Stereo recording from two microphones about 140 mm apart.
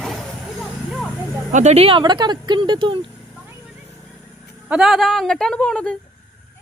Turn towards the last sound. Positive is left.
turn(degrees=5)  # may be behind; listen again after turning